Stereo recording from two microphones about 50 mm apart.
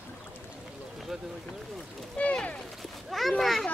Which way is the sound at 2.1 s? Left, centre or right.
Left.